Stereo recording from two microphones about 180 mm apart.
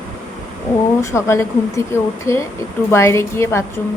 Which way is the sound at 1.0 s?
15° left (ahead or behind).